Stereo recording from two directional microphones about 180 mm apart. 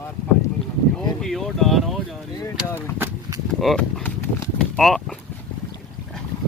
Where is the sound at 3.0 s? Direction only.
20° right (ahead or behind).